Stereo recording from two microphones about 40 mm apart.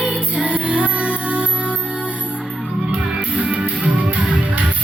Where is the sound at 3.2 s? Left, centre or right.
Right.